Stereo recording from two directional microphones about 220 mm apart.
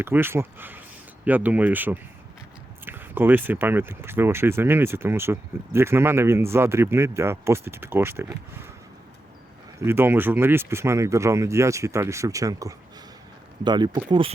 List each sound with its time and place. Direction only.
0.0 s speech: 10° right (ahead or behind)
9.8 s speech: 10° right (ahead or behind)